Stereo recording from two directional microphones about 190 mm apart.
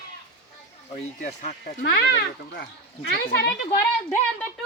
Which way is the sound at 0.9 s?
40° left (ahead or behind).